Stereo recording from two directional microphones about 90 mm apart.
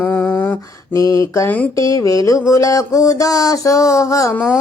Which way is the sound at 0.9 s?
40° left (ahead or behind).